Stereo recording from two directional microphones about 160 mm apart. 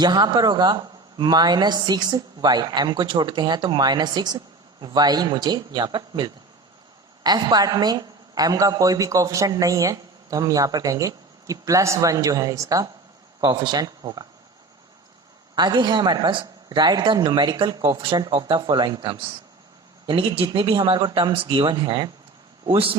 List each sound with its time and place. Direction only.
0.0 s a man's voice: 25° right (ahead or behind)
15.5 s a man's voice: 25° right (ahead or behind)